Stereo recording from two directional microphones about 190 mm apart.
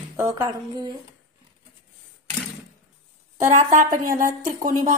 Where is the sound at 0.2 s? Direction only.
20° right (ahead or behind).